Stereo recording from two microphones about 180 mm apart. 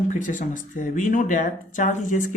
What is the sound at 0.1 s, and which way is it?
A man's voice, 45° left (ahead or behind).